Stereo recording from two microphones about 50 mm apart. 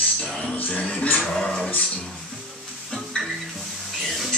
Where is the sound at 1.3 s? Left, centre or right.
Centre.